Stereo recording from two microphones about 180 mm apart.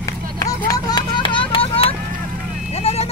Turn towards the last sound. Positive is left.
turn(degrees=35)  # may be behind; listen again after turning